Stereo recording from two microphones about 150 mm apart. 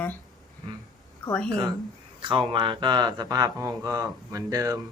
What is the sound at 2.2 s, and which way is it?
Speech, 35° right (ahead or behind).